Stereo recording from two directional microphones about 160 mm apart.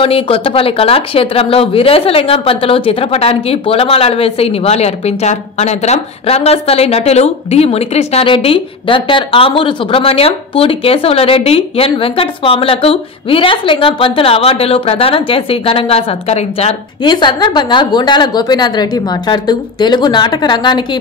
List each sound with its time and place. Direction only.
0.0 s speech: 35° left (ahead or behind)
17.0 s a woman's voice: 30° left (ahead or behind)